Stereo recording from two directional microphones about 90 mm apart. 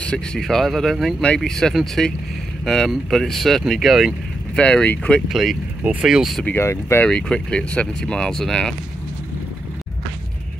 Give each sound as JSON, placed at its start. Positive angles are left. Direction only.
{"t": 0.0, "sound": "speech", "side_deg": 10}
{"t": 4.6, "sound": "speech", "side_deg": 15}
{"t": 5.3, "sound": "speech", "side_deg": 0}
{"t": 6.4, "sound": "speech", "side_deg": 25}
{"t": 7.1, "sound": "speech", "side_deg": 10}